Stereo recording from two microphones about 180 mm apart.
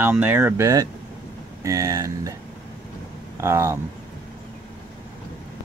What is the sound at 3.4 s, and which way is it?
Speech, 15° right (ahead or behind).